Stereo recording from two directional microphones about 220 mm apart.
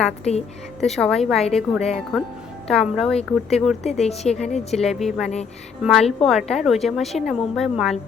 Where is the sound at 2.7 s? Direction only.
Centre (ahead or behind).